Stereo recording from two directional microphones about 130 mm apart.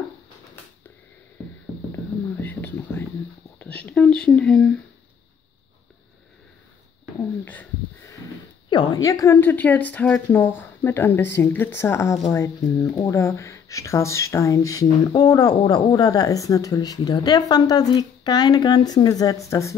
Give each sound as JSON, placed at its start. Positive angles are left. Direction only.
{"t": 2.4, "sound": "a sound", "side_deg": 15}
{"t": 3.5, "sound": "speech", "side_deg": 10}
{"t": 8.6, "sound": "a woman's voice", "side_deg": 35}